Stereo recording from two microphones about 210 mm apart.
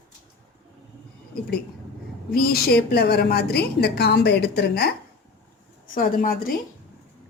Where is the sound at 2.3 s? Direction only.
45° left (ahead or behind).